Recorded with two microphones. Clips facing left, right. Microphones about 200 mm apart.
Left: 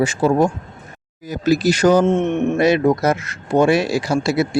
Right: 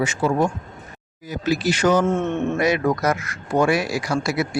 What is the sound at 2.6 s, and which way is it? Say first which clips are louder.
Speech: left 6 dB; 30° left (ahead or behind).